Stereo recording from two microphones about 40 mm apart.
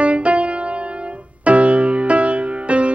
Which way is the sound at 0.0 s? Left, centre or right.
Right.